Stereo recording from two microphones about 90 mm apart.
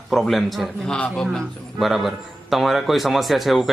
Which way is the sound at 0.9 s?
10° left (ahead or behind).